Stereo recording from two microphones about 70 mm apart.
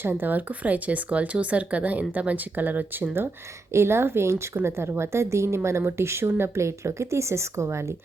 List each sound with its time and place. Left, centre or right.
0.0 s a woman's voice: right